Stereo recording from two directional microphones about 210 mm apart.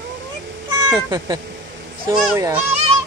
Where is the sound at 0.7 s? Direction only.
15° right (ahead or behind).